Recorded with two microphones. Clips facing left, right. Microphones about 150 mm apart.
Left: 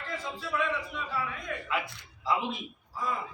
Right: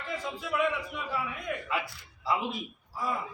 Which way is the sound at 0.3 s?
10° right (ahead or behind).